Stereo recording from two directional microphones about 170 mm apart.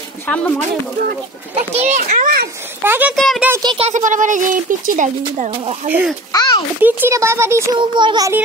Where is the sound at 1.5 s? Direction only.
40° right (ahead or behind).